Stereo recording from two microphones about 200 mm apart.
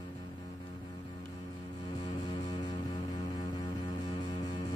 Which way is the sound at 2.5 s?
20° left (ahead or behind).